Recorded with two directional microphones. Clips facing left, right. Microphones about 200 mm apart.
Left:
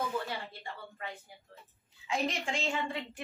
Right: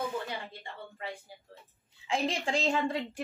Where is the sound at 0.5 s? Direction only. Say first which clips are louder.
Even; 25° right (ahead or behind).